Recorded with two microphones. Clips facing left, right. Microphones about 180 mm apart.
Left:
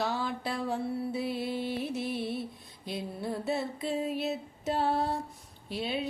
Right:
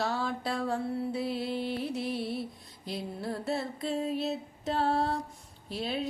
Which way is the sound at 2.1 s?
20° left (ahead or behind).